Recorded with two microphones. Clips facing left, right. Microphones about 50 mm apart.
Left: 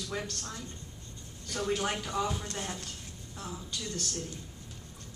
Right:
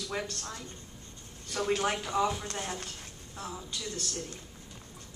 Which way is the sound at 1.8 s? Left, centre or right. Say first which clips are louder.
Right 3 dB; centre.